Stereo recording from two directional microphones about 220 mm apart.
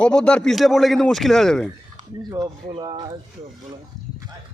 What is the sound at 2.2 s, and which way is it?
Speech, 15° right (ahead or behind).